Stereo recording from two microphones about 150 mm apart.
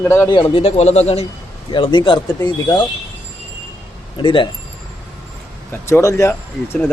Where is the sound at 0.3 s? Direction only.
30° left (ahead or behind).